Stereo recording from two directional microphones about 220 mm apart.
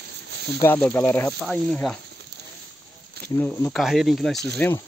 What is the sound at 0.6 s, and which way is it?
Speech, 10° left (ahead or behind).